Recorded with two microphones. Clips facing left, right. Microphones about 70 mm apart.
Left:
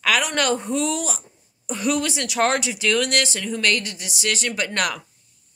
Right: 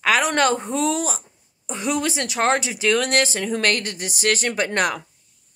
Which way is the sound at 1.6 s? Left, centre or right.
Right.